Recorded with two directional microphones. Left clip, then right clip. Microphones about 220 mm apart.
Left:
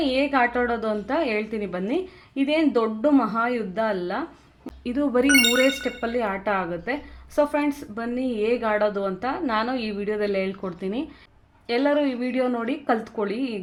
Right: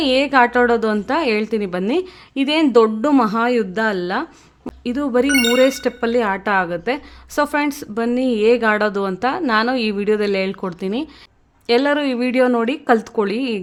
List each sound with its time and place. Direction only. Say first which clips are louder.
0.0 s speech: right 7 dB; 40° right (ahead or behind)